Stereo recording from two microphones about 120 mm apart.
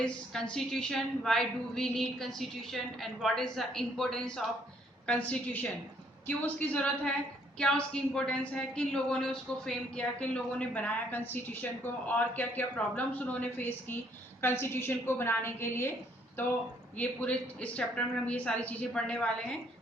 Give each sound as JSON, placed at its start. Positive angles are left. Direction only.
{"t": 0.5, "sound": "a woman's voice", "side_deg": 5}
{"t": 17.0, "sound": "a woman's voice", "side_deg": 10}